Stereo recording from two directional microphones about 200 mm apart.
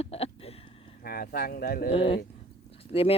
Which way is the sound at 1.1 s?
50° left (ahead or behind).